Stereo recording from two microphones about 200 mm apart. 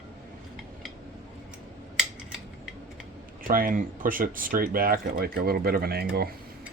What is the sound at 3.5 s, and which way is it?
Speech, 45° right (ahead or behind).